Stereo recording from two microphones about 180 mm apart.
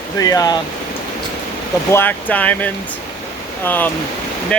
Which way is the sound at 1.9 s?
10° left (ahead or behind).